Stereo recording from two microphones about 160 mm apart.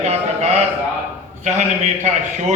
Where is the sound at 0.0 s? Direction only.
45° right (ahead or behind).